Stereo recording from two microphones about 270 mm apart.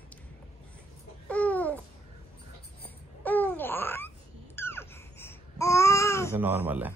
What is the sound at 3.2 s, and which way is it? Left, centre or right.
Babbling, centre.